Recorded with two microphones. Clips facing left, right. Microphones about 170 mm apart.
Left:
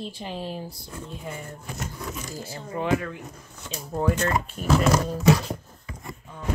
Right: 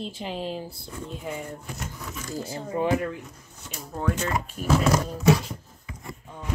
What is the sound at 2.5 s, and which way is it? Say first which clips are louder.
Speech: right 1 dB; 25° right (ahead or behind).